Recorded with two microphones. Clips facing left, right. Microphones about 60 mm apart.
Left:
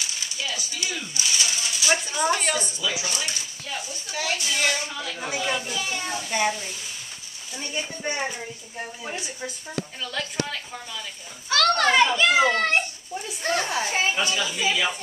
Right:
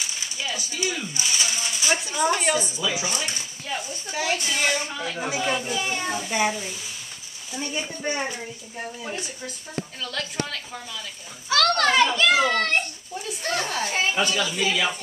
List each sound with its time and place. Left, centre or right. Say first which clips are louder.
0.0 s a sound: even; centre
2.0 s speech: right 1 dB; centre
2.8 s a woman's voice: even; centre
4.1 s a woman's voice: right 2 dB; centre
4.5 s speech: right 1 dB; centre
4.8 s speech: right 2 dB; centre
5.2 s speech: right 1 dB; centre
5.8 s speech: right 2 dB; right
6.2 s speech: left 1 dB; centre
9.1 s a child's voice: even; centre